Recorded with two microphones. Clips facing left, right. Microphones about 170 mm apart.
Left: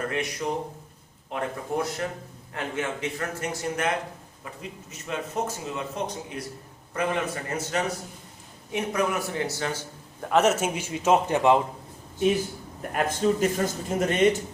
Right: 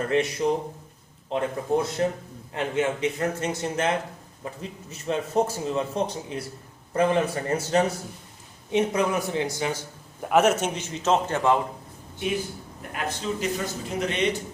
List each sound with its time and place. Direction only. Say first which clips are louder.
0.2 s a man's voice: right 5 dB; 25° right (ahead or behind); by 11.6 s 15° left (ahead or behind)
12.9 s a man's voice: left 6 dB; 50° left (ahead or behind)